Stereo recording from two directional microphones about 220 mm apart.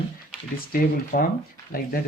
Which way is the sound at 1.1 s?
45° left (ahead or behind).